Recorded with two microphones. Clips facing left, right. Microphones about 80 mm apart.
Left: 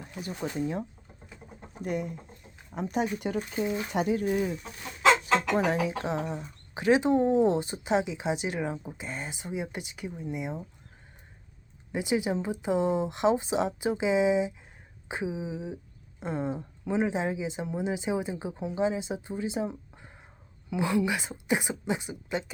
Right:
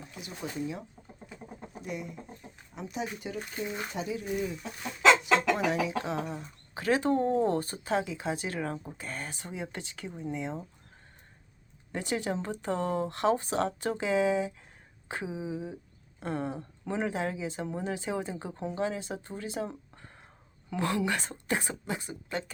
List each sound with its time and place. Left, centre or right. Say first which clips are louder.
0.4 s speech: left 4 dB; left
1.8 s speech: left 7 dB; left
5.2 s speech: left 1 dB; left; by 10.1 s centre
10.1 s speech: right 2 dB; centre
10.3 s speech: even; centre
11.9 s speech: left 4 dB; centre